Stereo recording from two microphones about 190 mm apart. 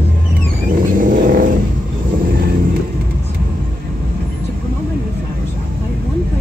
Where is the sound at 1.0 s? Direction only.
45° right (ahead or behind).